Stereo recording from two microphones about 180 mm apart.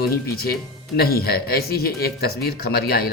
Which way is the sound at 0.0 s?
60° left (ahead or behind).